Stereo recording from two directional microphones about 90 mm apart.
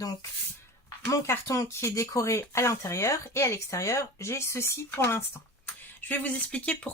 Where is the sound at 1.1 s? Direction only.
35° left (ahead or behind).